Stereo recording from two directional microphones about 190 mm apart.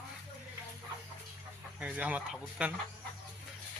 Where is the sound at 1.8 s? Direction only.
10° right (ahead or behind).